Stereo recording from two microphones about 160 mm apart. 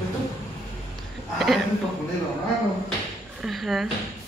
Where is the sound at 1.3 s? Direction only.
Centre (ahead or behind).